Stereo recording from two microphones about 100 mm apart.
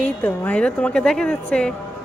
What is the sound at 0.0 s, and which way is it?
A woman's voice, 15° left (ahead or behind).